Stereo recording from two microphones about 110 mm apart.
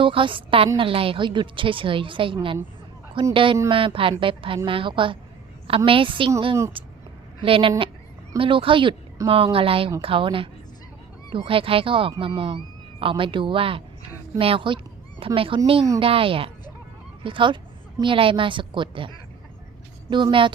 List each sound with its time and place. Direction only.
0.0 s a woman's voice: 50° right (ahead or behind)
6.8 s a sound: 55° right (ahead or behind)
7.4 s a woman's voice: 55° right (ahead or behind)